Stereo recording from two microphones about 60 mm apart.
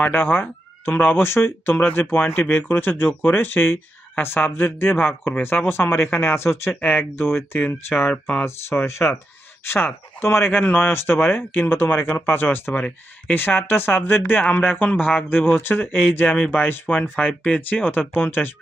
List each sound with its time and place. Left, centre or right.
0.1 s speech: left
8.1 s speech: centre
8.4 s speech: left
18.1 s speech: left